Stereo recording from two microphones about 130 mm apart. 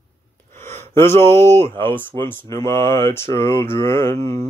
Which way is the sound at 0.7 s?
20° left (ahead or behind).